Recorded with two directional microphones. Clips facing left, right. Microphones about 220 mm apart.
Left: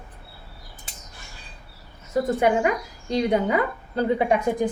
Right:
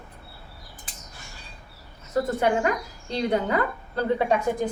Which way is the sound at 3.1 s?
15° left (ahead or behind).